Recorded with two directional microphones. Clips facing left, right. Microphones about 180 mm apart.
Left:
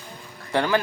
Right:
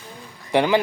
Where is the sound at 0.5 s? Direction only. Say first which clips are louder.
Right 4 dB; 15° right (ahead or behind).